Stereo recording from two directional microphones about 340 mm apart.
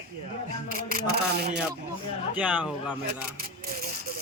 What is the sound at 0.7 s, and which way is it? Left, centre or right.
Speech, right.